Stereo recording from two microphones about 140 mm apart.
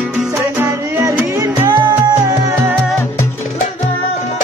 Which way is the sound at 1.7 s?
30° right (ahead or behind).